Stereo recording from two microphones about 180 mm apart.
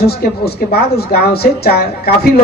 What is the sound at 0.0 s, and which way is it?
A woman's voice, 60° left (ahead or behind).